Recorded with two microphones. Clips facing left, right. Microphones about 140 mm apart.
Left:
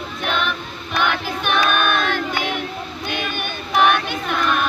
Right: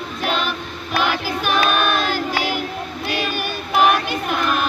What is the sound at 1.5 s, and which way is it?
Child singing, 35° right (ahead or behind).